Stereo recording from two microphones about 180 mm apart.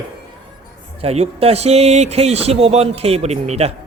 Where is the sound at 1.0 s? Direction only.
35° right (ahead or behind).